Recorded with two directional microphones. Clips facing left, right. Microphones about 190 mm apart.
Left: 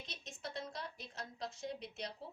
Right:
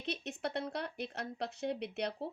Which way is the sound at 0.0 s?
65° right (ahead or behind).